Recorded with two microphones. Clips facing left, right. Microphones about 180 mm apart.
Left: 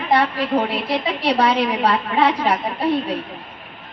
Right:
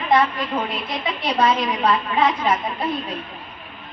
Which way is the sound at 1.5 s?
65° left (ahead or behind).